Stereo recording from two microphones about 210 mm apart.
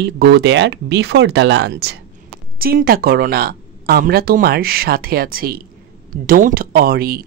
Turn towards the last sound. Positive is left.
turn(degrees=-45)  # may be behind; listen again after turning